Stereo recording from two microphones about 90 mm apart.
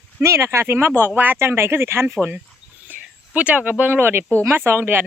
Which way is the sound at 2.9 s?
15° right (ahead or behind).